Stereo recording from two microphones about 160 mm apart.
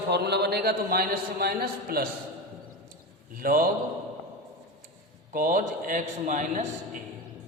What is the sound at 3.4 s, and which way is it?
Speech, 65° right (ahead or behind).